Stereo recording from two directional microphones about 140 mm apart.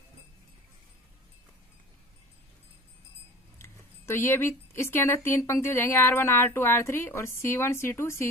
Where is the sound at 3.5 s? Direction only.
20° left (ahead or behind).